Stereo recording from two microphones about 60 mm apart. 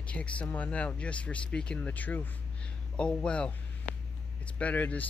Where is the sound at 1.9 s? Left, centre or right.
Left.